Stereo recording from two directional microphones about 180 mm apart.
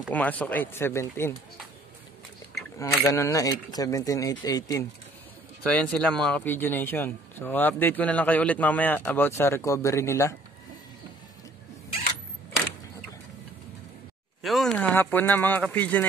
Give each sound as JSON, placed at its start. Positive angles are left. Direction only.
{"t": 0.1, "sound": "speech", "side_deg": 10}
{"t": 3.1, "sound": "speech", "side_deg": 20}
{"t": 5.7, "sound": "speech", "side_deg": 5}
{"t": 14.4, "sound": "speech", "side_deg": 0}